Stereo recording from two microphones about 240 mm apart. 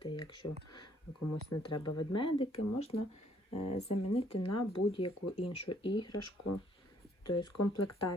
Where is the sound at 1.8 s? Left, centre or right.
Centre.